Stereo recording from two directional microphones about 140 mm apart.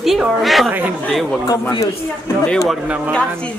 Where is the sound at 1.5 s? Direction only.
25° left (ahead or behind).